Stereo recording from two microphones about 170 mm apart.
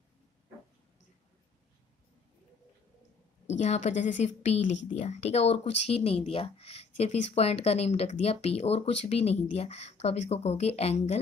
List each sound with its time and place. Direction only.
3.5 s a woman's voice: 40° left (ahead or behind)